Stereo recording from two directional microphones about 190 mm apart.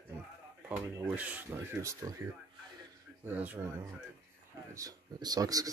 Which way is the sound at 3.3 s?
10° right (ahead or behind).